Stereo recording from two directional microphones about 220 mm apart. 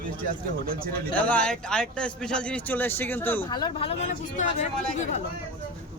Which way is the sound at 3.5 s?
25° left (ahead or behind).